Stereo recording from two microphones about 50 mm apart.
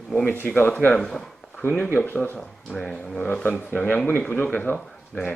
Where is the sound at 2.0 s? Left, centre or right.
Left.